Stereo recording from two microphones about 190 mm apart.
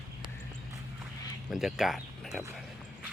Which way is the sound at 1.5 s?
Centre (ahead or behind).